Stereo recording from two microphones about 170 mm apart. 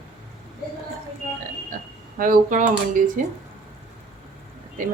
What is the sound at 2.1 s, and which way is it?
A woman's voice, 50° right (ahead or behind).